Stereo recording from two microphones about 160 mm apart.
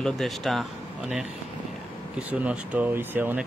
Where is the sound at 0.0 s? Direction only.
Centre (ahead or behind).